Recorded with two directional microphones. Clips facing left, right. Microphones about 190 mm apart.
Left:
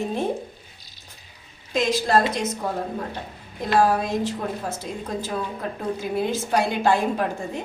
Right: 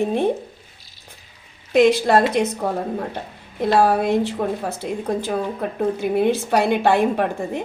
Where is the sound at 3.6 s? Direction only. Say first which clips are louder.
Right 3 dB; 60° right (ahead or behind).